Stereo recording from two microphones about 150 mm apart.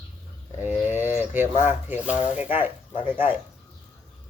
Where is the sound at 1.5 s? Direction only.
55° left (ahead or behind).